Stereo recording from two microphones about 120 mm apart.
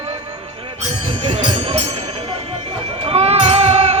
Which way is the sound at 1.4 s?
50° right (ahead or behind).